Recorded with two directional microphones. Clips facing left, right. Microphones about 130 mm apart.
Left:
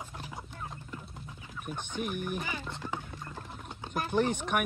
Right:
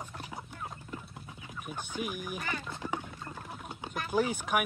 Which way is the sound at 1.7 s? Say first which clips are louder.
Left 2 dB; 5° right (ahead or behind).